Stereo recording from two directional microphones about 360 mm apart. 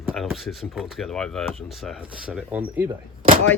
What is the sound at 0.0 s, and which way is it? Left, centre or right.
Speech, centre.